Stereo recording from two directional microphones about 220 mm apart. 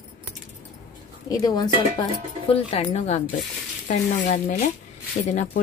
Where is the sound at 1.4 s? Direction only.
20° left (ahead or behind).